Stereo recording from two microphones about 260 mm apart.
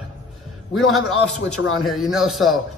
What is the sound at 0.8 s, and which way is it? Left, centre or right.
Speech, centre.